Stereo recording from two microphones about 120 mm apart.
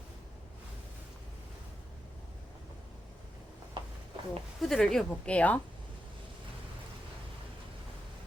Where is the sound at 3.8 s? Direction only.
45° right (ahead or behind).